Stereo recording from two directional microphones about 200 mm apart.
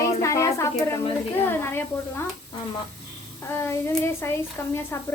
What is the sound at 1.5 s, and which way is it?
Speech, 10° left (ahead or behind).